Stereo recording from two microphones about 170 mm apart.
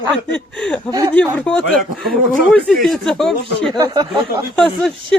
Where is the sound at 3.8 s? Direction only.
25° right (ahead or behind).